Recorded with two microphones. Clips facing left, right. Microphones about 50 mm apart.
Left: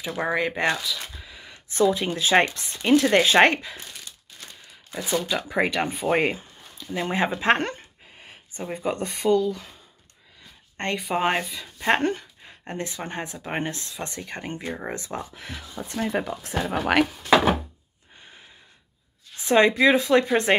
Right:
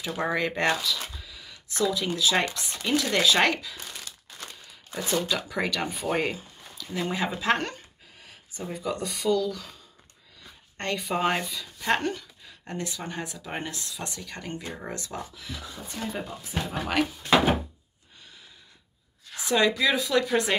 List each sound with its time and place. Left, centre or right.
0.0 s speech: centre
1.1 s a sound: left
2.8 s speech: left
4.9 s speech: centre
5.5 s speech: left
11.0 s speech: centre
11.8 s speech: left
15.8 s speech: left
19.4 s speech: left